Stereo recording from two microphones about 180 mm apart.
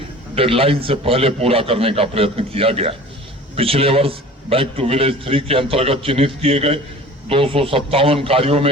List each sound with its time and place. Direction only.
0.3 s a man's voice: 30° right (ahead or behind)